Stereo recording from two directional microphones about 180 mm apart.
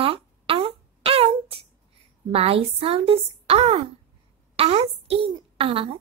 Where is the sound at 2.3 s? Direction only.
30° right (ahead or behind).